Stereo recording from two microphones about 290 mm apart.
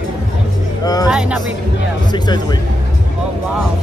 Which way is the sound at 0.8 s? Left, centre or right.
Centre.